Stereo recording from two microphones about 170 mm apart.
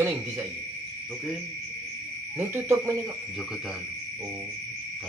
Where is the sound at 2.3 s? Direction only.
15° right (ahead or behind).